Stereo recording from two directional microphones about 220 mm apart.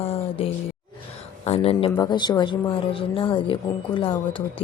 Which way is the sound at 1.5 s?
25° left (ahead or behind).